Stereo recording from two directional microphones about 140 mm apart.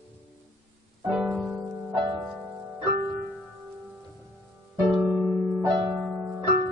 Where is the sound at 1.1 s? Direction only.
Centre (ahead or behind).